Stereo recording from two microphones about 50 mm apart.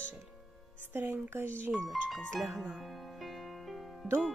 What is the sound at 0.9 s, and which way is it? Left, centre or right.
Speech, right.